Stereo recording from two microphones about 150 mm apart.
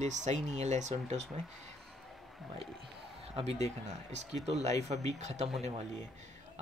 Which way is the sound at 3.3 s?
45° right (ahead or behind).